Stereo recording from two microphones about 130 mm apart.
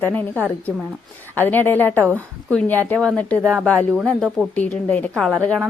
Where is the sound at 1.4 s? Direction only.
15° left (ahead or behind).